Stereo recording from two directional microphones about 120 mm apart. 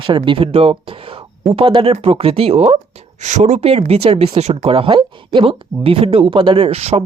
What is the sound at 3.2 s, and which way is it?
Speech, 75° right (ahead or behind).